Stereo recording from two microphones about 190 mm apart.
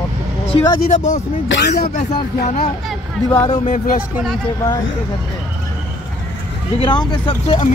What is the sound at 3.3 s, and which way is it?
Speech, 15° left (ahead or behind).